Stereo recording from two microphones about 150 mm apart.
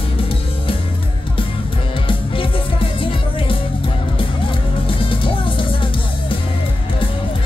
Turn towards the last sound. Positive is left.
turn(degrees=35)  # may be behind; listen again after turning